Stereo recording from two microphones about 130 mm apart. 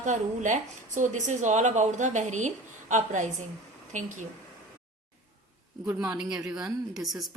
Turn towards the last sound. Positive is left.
turn(degrees=0)  # may be behind; listen again after turning